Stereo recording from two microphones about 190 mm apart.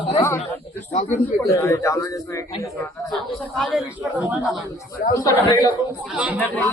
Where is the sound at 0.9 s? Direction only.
40° left (ahead or behind).